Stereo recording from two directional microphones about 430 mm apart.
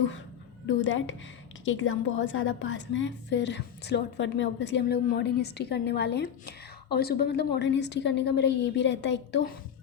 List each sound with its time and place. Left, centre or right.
0.7 s a woman's voice: left